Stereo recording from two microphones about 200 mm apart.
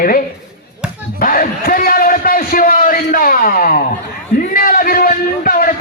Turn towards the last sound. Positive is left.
turn(degrees=45)  # may be behind; listen again after turning